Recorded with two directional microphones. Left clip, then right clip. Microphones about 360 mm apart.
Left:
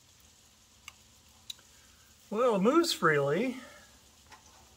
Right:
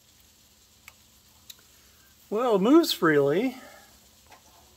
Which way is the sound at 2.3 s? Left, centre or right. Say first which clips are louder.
Right 5 dB; centre.